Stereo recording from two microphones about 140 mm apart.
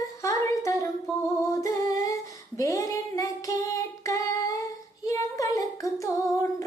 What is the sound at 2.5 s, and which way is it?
Female singing, 25° left (ahead or behind).